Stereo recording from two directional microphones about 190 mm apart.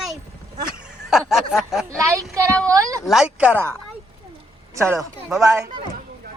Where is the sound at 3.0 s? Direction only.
5° right (ahead or behind).